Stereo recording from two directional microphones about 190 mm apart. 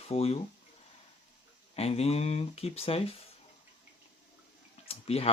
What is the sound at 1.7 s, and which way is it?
Speech, 30° left (ahead or behind).